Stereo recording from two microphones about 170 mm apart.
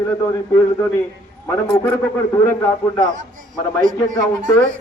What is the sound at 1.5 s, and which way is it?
A man's voice, 15° left (ahead or behind).